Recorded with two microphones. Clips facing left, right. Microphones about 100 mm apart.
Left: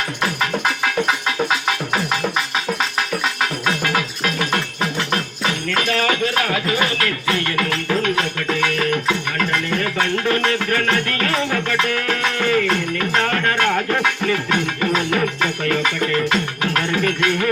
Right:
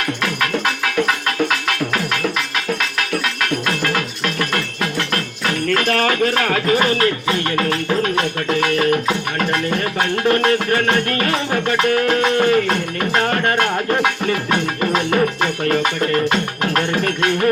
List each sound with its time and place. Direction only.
3.0 s music: 60° right (ahead or behind)
5.6 s music: 50° right (ahead or behind)
10.0 s music: 40° right (ahead or behind)
14.9 s music: 40° right (ahead or behind)